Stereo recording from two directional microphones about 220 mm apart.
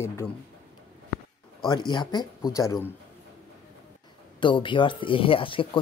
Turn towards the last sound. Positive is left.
turn(degrees=25)  # may be behind; listen again after turning